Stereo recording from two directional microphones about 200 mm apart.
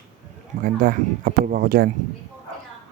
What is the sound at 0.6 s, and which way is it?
Speech, 45° right (ahead or behind).